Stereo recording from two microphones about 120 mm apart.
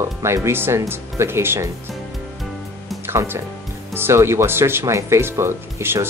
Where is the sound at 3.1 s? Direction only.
20° right (ahead or behind).